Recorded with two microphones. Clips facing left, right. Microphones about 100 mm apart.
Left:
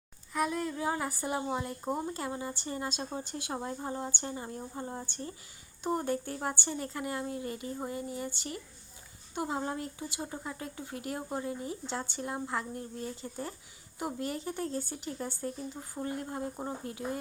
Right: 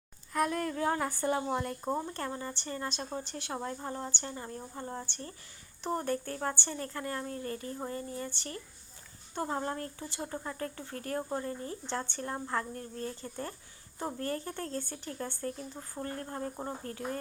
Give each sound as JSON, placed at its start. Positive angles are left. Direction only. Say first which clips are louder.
{"t": 0.3, "sound": "speech", "louder": "right 1 dB", "side_deg": 5}